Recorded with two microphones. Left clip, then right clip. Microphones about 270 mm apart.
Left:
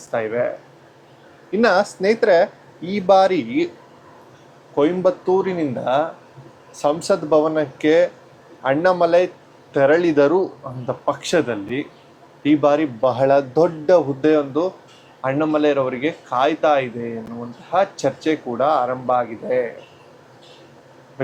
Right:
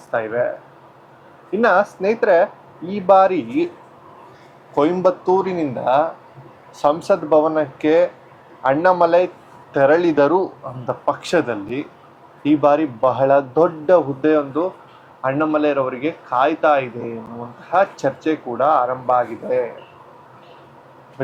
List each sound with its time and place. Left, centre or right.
0.1 s speech: centre
4.7 s speech: right